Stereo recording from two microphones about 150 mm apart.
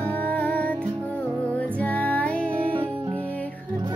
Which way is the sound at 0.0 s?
10° left (ahead or behind).